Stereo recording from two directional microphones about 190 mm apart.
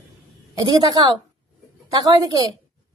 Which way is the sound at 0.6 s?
20° right (ahead or behind).